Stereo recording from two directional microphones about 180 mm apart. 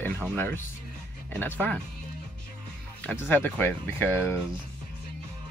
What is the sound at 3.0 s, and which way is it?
Speech, 10° left (ahead or behind).